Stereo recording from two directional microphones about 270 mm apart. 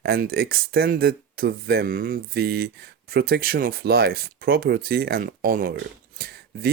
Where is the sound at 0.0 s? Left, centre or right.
Right.